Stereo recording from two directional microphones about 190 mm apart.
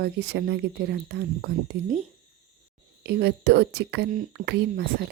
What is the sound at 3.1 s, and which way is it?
Speech, 55° right (ahead or behind).